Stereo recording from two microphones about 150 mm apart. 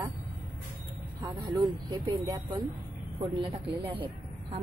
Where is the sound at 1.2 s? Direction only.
25° right (ahead or behind).